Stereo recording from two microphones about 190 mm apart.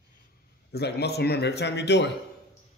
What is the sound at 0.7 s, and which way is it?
A man's voice, 60° left (ahead or behind).